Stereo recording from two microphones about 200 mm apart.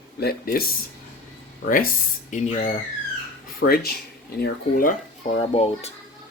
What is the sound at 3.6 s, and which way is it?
Speech, 75° left (ahead or behind).